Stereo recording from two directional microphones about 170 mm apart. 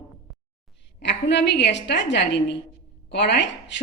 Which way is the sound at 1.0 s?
90° left.